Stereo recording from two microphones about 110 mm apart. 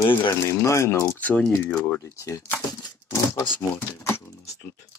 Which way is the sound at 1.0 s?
15° left (ahead or behind).